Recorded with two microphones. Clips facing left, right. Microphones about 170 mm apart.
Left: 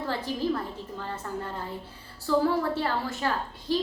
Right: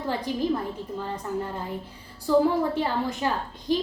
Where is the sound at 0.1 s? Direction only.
15° right (ahead or behind).